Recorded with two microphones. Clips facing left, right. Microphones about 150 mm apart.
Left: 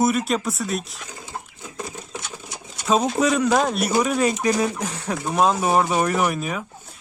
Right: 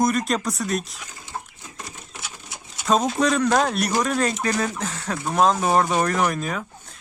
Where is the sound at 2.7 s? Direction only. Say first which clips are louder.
Left 1 dB; 5° left (ahead or behind).